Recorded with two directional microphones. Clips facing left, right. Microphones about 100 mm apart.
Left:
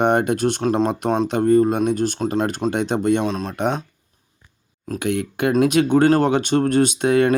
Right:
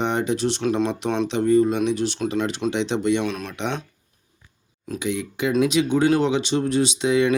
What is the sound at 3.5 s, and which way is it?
Speech, 45° left (ahead or behind).